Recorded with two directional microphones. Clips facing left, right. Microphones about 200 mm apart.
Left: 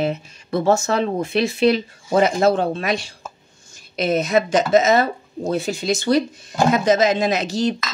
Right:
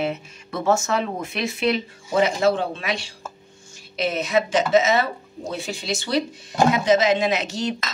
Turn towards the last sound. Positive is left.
turn(degrees=35)  # may be behind; listen again after turning